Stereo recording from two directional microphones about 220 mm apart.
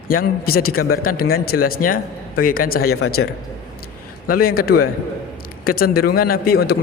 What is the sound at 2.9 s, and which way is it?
Speech, 75° left (ahead or behind).